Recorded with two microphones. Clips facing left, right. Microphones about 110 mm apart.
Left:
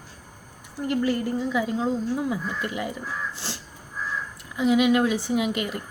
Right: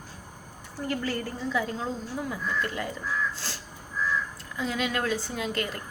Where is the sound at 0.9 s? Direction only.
15° left (ahead or behind).